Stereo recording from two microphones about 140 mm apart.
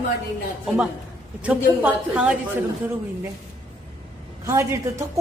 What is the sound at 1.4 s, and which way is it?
Speech, 10° right (ahead or behind).